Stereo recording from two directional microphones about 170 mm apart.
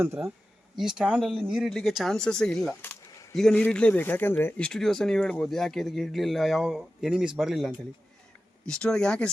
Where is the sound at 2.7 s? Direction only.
15° left (ahead or behind).